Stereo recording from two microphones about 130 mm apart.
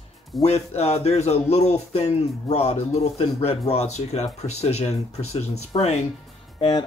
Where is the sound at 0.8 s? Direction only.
55° left (ahead or behind).